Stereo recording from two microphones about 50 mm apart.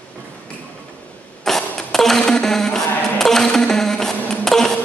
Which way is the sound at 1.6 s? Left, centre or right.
Centre.